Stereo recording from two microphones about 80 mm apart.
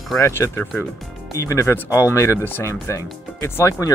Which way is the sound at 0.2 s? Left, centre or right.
Left.